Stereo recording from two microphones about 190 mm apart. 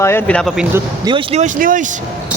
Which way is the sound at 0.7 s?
25° right (ahead or behind).